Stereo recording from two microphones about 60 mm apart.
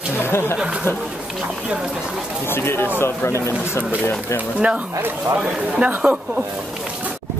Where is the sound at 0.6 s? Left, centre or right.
Centre.